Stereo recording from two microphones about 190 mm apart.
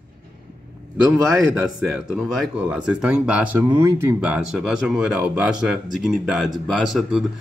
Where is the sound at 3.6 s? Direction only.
25° right (ahead or behind).